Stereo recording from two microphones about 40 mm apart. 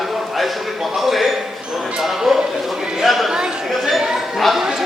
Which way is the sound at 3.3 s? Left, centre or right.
Centre.